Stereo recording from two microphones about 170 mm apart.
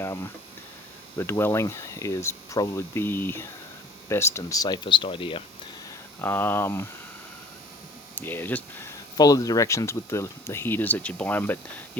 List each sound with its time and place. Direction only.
1.1 s speech: 15° left (ahead or behind); by 5.4 s 30° left (ahead or behind)
6.2 s speech: 10° left (ahead or behind)
8.1 s speech: 10° left (ahead or behind)